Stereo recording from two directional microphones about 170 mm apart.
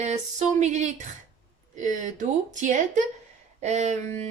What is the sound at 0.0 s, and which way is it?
Speech, 45° right (ahead or behind).